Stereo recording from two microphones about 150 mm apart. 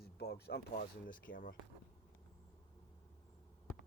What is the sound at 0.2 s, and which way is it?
Speech, 90° left.